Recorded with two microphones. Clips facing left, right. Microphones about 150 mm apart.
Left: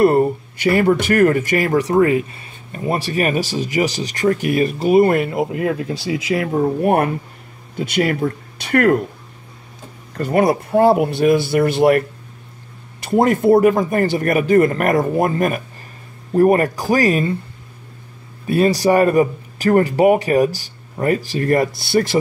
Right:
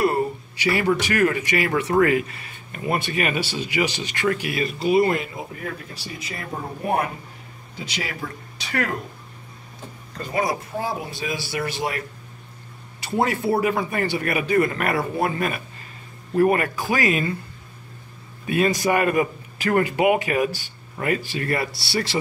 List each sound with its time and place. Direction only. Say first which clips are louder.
0.0 s speech: left 8 dB; 50° left (ahead or behind)
10.1 s speech: left 9 dB; 60° left (ahead or behind)
13.1 s a man's voice: left 9 dB; 50° left (ahead or behind)
18.5 s a man's voice: left 6 dB; 35° left (ahead or behind)